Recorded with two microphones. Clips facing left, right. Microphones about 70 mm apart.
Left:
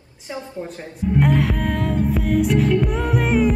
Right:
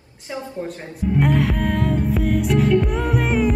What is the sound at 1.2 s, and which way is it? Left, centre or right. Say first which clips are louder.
Music: even; centre.